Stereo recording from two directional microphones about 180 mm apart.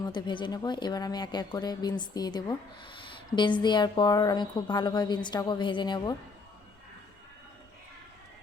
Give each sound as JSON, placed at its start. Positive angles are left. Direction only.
{"t": 0.0, "sound": "a woman's voice", "side_deg": 25}